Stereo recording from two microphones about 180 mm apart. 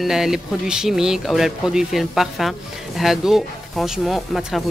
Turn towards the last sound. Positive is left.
turn(degrees=0)  # may be behind; listen again after turning